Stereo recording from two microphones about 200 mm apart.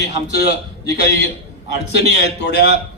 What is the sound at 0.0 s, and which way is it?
A man's voice, 55° left (ahead or behind).